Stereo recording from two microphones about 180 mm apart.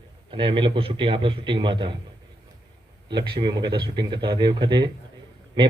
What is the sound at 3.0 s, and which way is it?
A man's voice, 25° right (ahead or behind).